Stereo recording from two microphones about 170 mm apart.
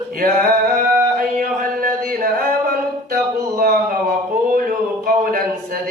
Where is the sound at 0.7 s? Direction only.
50° right (ahead or behind).